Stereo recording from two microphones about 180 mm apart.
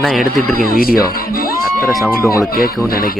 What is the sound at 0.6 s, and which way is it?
Speech, 55° left (ahead or behind).